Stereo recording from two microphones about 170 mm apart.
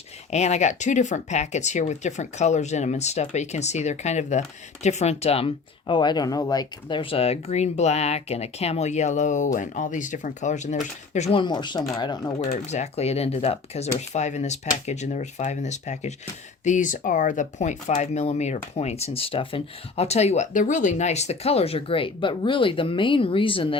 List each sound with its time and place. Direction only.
0.3 s speech: 40° left (ahead or behind); by 12.5 s 25° left (ahead or behind)
12.5 s speech: 40° left (ahead or behind)